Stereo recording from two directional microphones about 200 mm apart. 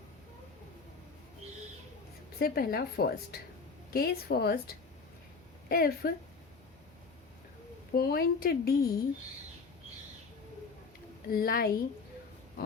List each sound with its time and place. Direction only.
2.4 s speech: 50° left (ahead or behind)
7.9 s speech: 50° left (ahead or behind)
11.3 s speech: 45° left (ahead or behind)